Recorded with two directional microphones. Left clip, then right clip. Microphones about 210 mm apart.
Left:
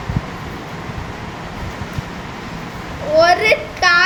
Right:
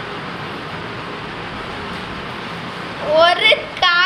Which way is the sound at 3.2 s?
20° left (ahead or behind).